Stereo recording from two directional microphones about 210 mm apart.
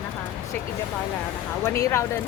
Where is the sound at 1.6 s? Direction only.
10° left (ahead or behind).